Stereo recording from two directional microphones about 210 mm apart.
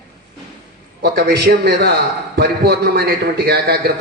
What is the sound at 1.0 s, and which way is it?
A man's voice, 50° right (ahead or behind).